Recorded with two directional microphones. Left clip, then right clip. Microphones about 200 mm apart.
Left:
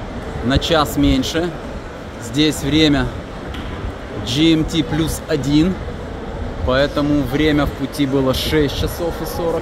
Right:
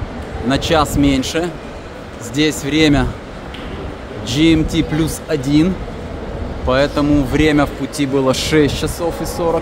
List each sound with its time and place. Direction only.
0.5 s speech: 5° right (ahead or behind)
4.3 s speech: centre (ahead or behind)
6.7 s speech: 5° right (ahead or behind); by 9.3 s 20° right (ahead or behind)